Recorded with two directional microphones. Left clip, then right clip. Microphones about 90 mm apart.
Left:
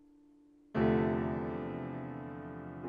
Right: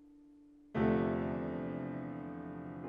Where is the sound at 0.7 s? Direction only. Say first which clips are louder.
Left 2 dB; 40° right (ahead or behind).